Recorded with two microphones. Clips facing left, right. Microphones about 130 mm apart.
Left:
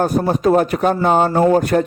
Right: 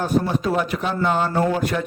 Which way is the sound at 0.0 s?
45° left (ahead or behind).